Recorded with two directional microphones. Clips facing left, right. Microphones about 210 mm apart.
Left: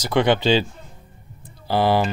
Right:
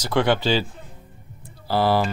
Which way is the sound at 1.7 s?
20° left (ahead or behind).